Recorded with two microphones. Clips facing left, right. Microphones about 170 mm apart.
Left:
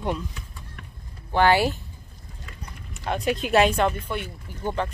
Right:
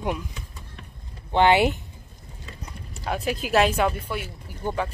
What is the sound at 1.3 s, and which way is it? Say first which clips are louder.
Speech: right 1 dB; 20° right (ahead or behind).